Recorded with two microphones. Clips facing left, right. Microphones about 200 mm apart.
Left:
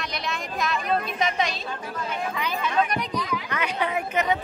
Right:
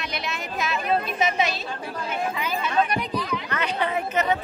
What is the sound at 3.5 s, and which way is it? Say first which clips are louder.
Speech: right 1 dB; 10° left (ahead or behind).